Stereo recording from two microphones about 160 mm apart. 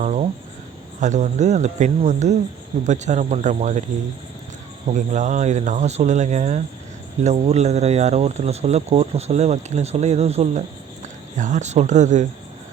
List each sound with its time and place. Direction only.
0.0 s speech: 45° right (ahead or behind)
4.9 s speech: 50° right (ahead or behind)